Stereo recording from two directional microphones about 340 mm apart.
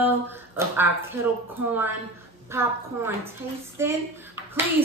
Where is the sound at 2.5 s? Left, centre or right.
Centre.